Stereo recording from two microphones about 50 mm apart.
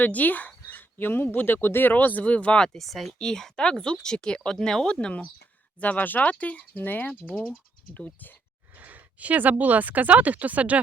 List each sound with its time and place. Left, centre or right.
0.0 s speech: left
2.6 s speech: centre
3.2 s speech: centre
4.9 s speech: left
8.7 s speech: right